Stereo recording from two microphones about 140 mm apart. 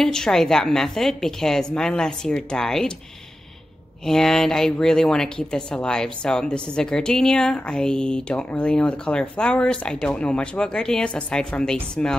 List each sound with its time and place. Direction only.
0.0 s speech: 5° left (ahead or behind)
4.0 s speech: 5° left (ahead or behind)